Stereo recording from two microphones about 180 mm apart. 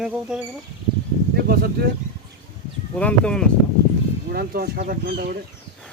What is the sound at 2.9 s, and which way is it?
Speech, 10° left (ahead or behind).